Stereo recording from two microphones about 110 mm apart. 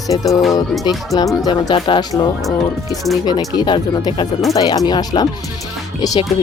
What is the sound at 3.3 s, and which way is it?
Speech, 40° left (ahead or behind).